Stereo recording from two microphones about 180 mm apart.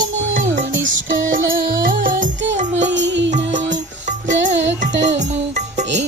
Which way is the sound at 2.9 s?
80° right.